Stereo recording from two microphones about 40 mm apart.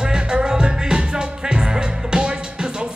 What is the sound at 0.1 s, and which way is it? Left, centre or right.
Music, right.